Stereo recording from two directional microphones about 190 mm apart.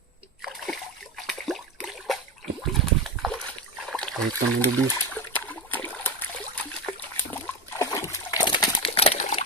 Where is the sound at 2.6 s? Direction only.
Centre (ahead or behind).